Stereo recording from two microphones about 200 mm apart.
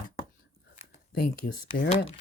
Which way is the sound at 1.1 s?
55° left (ahead or behind).